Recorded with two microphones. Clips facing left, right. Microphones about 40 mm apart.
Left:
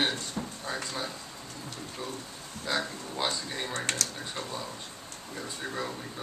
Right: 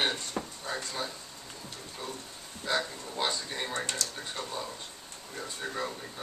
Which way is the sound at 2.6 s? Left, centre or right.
Centre.